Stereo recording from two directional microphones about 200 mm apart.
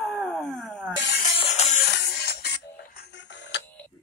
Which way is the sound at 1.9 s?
55° left (ahead or behind).